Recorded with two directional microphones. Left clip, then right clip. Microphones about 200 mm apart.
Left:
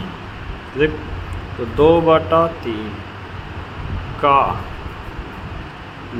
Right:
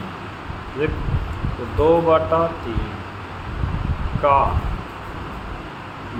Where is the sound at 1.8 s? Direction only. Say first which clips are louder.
Left 3 dB; 25° left (ahead or behind).